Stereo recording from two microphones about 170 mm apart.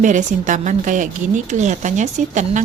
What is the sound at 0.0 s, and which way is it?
A woman's voice, 45° right (ahead or behind).